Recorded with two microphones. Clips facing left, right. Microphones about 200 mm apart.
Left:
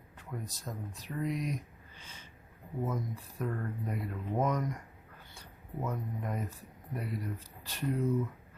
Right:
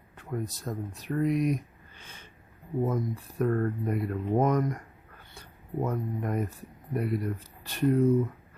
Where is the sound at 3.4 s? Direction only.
55° right (ahead or behind).